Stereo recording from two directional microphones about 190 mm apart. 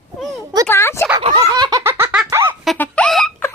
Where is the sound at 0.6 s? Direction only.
15° left (ahead or behind).